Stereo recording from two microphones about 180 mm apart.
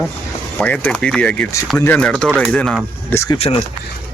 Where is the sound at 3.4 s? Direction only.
30° left (ahead or behind).